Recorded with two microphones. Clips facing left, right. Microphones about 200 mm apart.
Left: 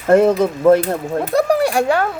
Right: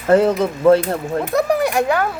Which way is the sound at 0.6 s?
15° left (ahead or behind).